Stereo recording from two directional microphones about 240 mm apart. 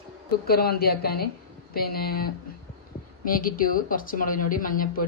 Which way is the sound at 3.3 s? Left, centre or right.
Left.